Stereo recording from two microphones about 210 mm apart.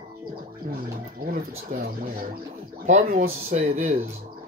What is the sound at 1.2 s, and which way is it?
Speech, 45° right (ahead or behind).